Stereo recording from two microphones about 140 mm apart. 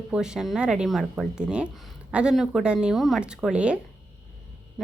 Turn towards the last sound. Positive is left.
turn(degrees=-5)  # may be behind; listen again after turning